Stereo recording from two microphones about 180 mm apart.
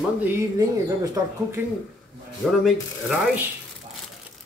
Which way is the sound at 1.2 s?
20° right (ahead or behind).